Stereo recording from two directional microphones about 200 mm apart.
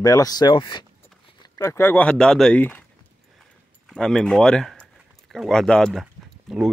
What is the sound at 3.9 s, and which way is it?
Speech, centre (ahead or behind).